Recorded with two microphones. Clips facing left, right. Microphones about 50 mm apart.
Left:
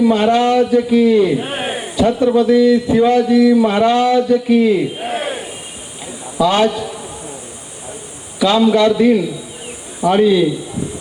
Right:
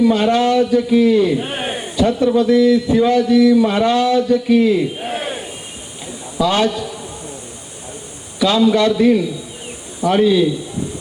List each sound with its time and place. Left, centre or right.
0.0 s speech: left
1.4 s a sound: centre
2.0 s a man's voice: left; by 5.5 s centre
6.4 s speech: left
6.7 s a man's voice: centre
8.4 s a man's voice: left